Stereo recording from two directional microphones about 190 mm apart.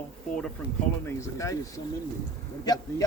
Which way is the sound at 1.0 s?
15° left (ahead or behind).